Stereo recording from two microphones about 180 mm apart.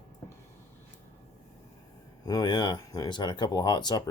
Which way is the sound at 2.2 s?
20° left (ahead or behind).